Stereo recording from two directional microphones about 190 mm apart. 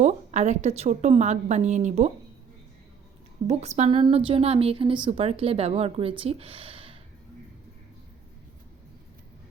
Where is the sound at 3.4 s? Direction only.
35° right (ahead or behind).